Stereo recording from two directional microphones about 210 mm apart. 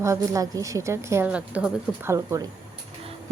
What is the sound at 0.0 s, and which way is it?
A woman's voice, 15° right (ahead or behind).